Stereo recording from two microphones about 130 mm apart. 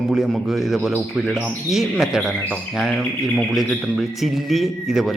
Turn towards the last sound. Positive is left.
turn(degrees=0)  # may be behind; listen again after turning